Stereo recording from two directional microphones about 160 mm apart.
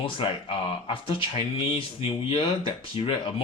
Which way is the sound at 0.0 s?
35° left (ahead or behind).